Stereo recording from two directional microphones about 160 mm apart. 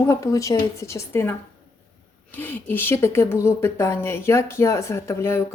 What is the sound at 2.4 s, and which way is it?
A woman's voice, 10° left (ahead or behind).